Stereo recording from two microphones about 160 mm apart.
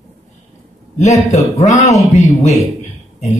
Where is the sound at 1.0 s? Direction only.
20° left (ahead or behind).